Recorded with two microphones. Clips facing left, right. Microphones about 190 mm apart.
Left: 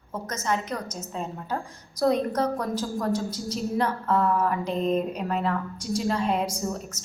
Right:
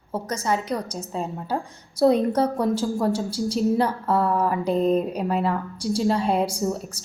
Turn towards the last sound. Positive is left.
turn(degrees=-30)  # may be behind; listen again after turning